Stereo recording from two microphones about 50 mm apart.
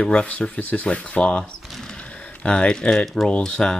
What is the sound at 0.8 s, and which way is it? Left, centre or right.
Speech, left.